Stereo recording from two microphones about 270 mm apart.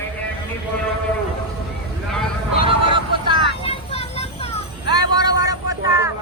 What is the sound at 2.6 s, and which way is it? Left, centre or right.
Vehicle, centre.